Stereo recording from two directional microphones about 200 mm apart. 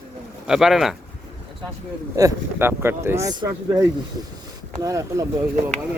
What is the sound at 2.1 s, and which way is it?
Speech, 15° right (ahead or behind).